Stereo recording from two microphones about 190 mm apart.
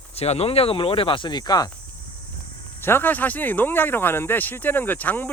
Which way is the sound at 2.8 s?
10° left (ahead or behind).